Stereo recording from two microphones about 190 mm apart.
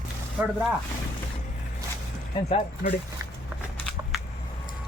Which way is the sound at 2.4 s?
40° left (ahead or behind).